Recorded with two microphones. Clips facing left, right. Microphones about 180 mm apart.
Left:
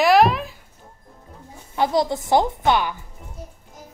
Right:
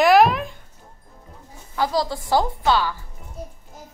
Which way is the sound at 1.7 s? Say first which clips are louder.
Left 3 dB; 20° left (ahead or behind).